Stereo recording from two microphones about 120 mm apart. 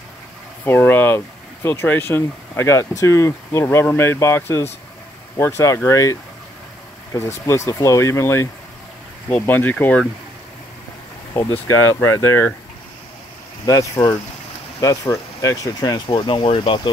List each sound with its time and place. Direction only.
0.7 s speech: 15° left (ahead or behind)
7.2 s speech: 25° left (ahead or behind)
11.6 s speech: 25° left (ahead or behind)
13.7 s speech: 30° left (ahead or behind); by 16.9 s 45° left (ahead or behind)